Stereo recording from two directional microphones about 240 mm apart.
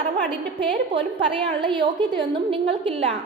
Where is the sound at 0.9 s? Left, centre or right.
Right.